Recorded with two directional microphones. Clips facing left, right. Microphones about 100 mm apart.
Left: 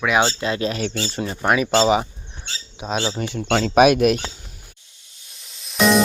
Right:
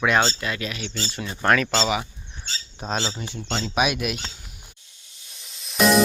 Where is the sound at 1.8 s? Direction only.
30° left (ahead or behind).